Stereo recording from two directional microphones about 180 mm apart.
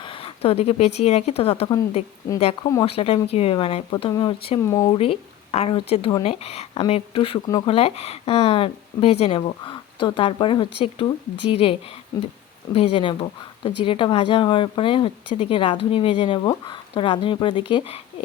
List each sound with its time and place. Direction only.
0.0 s speech: 30° left (ahead or behind)
4.7 s speech: 15° left (ahead or behind)
4.9 s speech: 35° left (ahead or behind)
7.8 s speech: 35° left (ahead or behind)